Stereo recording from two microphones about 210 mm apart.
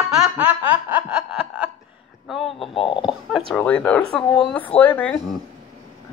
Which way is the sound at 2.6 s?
25° left (ahead or behind).